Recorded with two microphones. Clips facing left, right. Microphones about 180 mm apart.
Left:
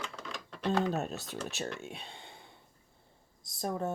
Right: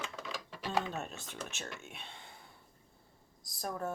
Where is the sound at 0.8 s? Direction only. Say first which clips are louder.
Left 8 dB; 35° left (ahead or behind).